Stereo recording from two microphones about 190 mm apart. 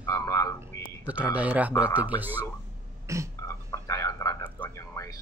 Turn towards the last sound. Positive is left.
turn(degrees=15)  # may be behind; listen again after turning